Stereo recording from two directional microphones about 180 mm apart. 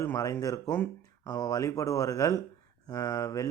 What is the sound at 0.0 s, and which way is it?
Speech, 15° left (ahead or behind).